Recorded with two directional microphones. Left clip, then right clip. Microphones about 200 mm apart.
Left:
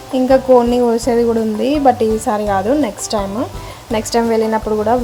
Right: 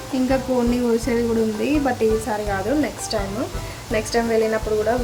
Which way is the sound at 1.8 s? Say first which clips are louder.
Left 9 dB; 25° left (ahead or behind).